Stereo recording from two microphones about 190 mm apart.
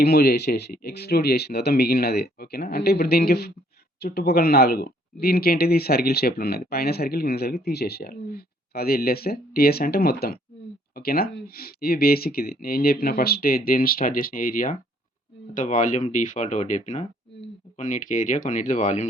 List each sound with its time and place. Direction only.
0.0 s speech: 55° left (ahead or behind)